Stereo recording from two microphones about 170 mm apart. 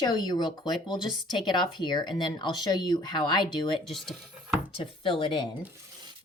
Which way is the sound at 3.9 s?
Centre (ahead or behind).